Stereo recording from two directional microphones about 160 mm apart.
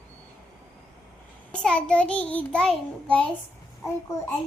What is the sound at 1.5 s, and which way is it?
A child's voice, 5° left (ahead or behind).